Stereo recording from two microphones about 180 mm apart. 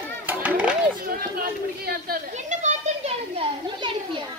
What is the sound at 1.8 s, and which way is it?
Chatter, 55° right (ahead or behind).